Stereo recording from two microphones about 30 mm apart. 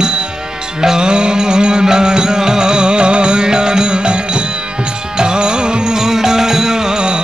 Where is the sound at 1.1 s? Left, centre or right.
Right.